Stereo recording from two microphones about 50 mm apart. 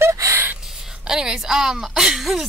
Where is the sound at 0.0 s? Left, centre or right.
Right.